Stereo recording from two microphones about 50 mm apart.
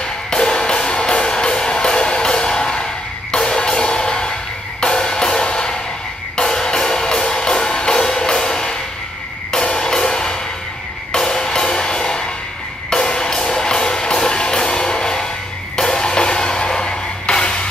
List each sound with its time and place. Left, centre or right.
0.0 s music: centre